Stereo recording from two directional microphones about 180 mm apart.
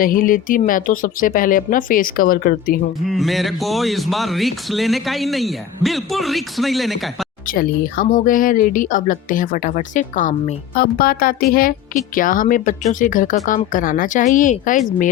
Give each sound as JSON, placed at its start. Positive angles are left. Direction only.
{"t": 0.0, "sound": "speech", "side_deg": 50}
{"t": 3.1, "sound": "speech", "side_deg": 0}
{"t": 7.4, "sound": "speech", "side_deg": 55}